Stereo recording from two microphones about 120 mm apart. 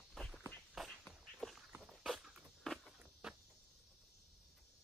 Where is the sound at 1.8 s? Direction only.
Centre (ahead or behind).